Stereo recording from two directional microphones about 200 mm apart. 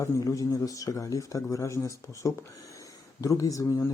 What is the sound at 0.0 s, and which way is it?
Speech, 15° left (ahead or behind).